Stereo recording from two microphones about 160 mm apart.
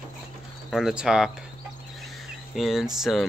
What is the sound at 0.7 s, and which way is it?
Speech, 5° right (ahead or behind).